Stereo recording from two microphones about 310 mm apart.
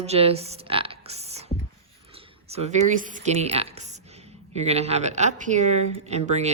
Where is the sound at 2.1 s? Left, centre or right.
Centre.